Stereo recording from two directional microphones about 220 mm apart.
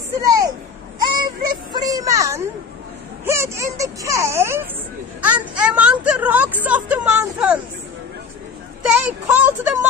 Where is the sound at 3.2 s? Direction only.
15° right (ahead or behind).